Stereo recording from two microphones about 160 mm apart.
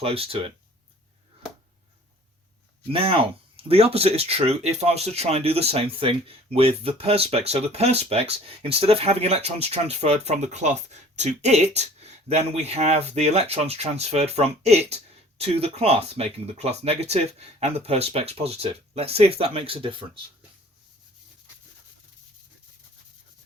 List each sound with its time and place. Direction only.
0.0 s speech: 35° right (ahead or behind)
2.9 s speech: 35° right (ahead or behind)